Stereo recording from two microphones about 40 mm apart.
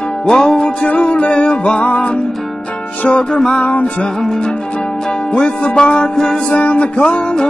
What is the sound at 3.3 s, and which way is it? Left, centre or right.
Music, centre.